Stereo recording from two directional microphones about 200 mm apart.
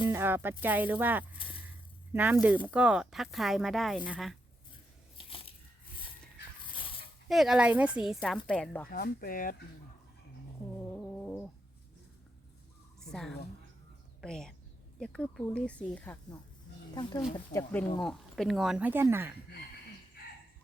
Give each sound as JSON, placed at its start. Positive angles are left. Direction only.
{"t": 0.0, "sound": "music", "side_deg": -15}
{"t": 0.6, "sound": "speech", "side_deg": -10}
{"t": 1.4, "sound": "a sound", "side_deg": 25}
{"t": 2.1, "sound": "a woman's voice", "side_deg": -10}
{"t": 5.1, "sound": "crushing", "side_deg": 25}
{"t": 6.7, "sound": "dog", "side_deg": 25}
{"t": 7.3, "sound": "a woman's voice", "side_deg": 0}
{"t": 8.9, "sound": "speech", "side_deg": 45}
{"t": 13.0, "sound": "a sound", "side_deg": 0}
{"t": 14.2, "sound": "a woman's voice", "side_deg": 5}
{"t": 16.9, "sound": "a woman's voice", "side_deg": 20}
{"t": 20.2, "sound": "a sound", "side_deg": 50}